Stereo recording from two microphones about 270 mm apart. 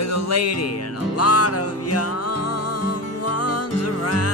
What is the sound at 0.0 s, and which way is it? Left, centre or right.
Music, left.